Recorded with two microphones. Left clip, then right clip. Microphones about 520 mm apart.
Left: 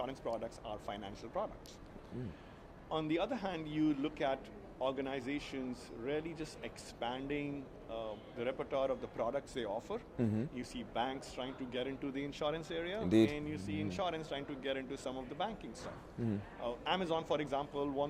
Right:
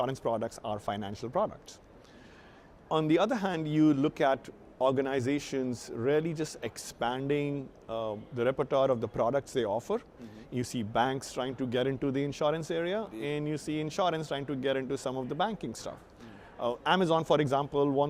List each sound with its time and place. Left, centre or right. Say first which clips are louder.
0.0 s speech: right 9 dB; right
2.9 s speech: right 9 dB; right